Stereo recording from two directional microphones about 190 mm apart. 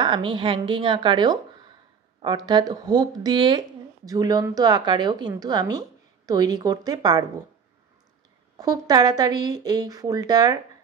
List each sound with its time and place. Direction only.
0.0 s a woman's voice: 25° right (ahead or behind)
8.5 s a woman's voice: 20° right (ahead or behind)